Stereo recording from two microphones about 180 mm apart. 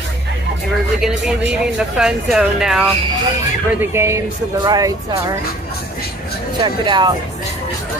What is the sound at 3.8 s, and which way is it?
Speech, 15° right (ahead or behind).